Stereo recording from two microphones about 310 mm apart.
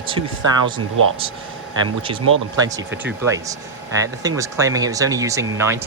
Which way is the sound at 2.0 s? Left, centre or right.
Centre.